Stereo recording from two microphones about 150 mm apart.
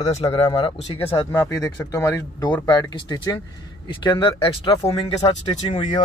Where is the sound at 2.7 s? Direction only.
25° left (ahead or behind).